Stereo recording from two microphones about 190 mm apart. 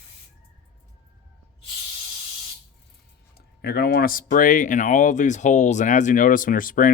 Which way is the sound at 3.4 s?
55° left (ahead or behind).